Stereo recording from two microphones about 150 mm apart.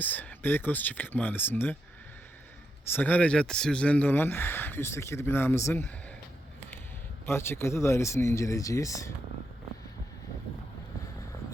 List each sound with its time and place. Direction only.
0.0 s speech: 10° left (ahead or behind)
2.8 s speech: 15° left (ahead or behind)
7.3 s speech: 15° left (ahead or behind)